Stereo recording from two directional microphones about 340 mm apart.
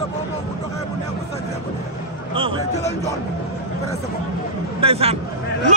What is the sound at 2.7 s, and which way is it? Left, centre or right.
Speech, centre.